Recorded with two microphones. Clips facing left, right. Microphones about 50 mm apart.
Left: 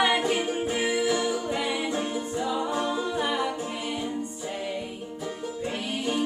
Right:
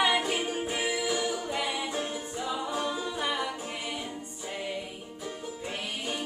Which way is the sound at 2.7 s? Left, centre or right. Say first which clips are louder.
Left 4 dB; centre.